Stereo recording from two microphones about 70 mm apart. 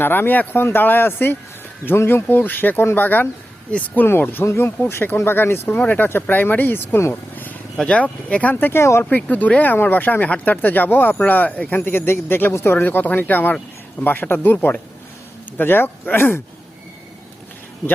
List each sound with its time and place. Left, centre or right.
0.0 s speech: left
7.8 s speech: centre
8.5 s speech: left
9.0 s speech: left